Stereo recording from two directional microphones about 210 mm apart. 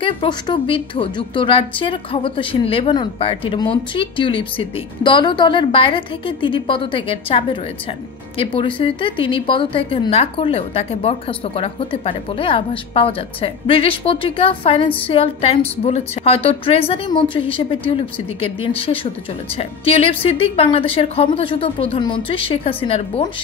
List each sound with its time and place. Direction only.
0.0 s a woman's voice: 20° left (ahead or behind)